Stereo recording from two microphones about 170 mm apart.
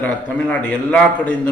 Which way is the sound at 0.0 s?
10° left (ahead or behind).